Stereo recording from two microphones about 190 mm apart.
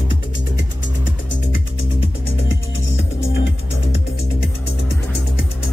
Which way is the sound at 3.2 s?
70° left (ahead or behind).